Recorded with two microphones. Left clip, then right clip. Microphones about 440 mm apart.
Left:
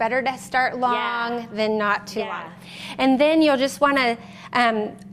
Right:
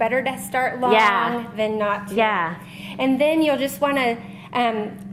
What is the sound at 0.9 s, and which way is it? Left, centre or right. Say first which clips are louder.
Speech: right 8 dB; right.